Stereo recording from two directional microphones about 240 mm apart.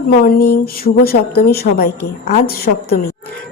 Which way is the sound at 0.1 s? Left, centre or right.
Left.